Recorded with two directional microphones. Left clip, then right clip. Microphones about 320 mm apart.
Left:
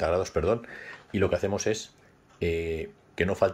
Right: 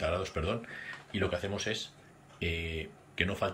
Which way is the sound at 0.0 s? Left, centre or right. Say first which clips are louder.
Left 7 dB; centre.